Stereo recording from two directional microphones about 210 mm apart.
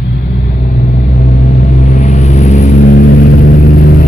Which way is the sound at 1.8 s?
35° left (ahead or behind).